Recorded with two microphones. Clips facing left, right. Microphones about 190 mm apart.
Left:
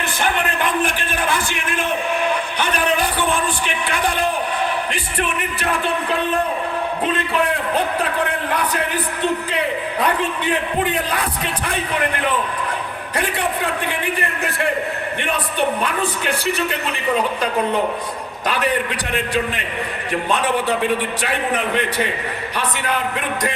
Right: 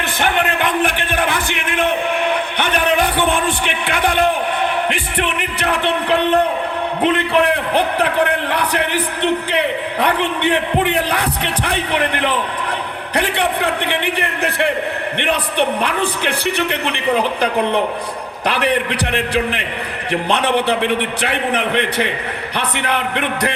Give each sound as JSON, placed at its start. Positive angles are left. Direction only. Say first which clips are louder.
{"t": 0.2, "sound": "a man's voice", "louder": "right 3 dB", "side_deg": -60}
{"t": 3.6, "sound": "a man's voice", "louder": "right 3 dB", "side_deg": -60}